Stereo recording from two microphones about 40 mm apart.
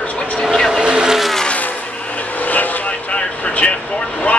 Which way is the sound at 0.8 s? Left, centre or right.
Centre.